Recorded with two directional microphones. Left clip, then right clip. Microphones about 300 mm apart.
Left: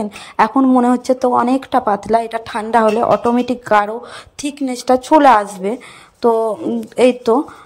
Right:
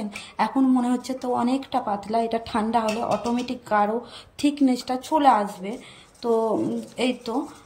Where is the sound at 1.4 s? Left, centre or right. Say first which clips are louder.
Left 10 dB; centre.